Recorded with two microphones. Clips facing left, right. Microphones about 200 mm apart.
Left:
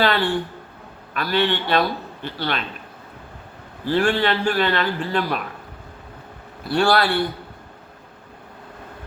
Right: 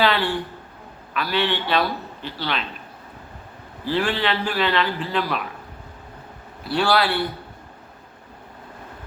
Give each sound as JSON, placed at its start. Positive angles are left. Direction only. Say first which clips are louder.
{"t": 0.0, "sound": "a man's voice", "louder": "left 1 dB", "side_deg": 45}
{"t": 3.8, "sound": "a man's voice", "louder": "left 3 dB", "side_deg": 50}
{"t": 6.7, "sound": "a man's voice", "louder": "left 2 dB", "side_deg": 50}